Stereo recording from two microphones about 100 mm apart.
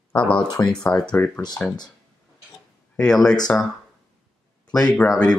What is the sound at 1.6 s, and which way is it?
Speech, 15° left (ahead or behind).